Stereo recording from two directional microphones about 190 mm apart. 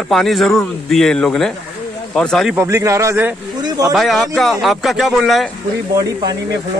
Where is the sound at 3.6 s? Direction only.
20° right (ahead or behind).